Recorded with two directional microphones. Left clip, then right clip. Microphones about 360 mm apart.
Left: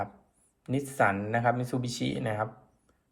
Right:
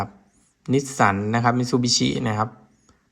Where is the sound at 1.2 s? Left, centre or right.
Centre.